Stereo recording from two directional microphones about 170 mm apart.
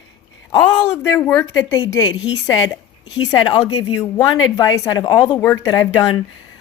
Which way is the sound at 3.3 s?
25° left (ahead or behind).